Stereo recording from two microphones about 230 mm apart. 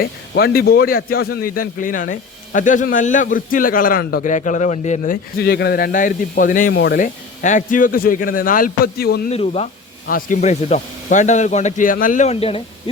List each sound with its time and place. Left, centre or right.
0.0 s speech: left
5.4 s speech: left
9.3 s speech: left